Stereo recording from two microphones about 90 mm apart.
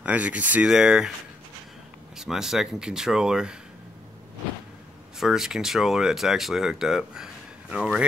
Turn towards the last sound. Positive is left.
turn(degrees=-10)  # may be behind; listen again after turning